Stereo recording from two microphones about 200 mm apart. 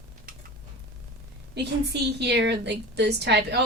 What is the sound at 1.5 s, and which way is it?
A woman's voice, 60° right (ahead or behind).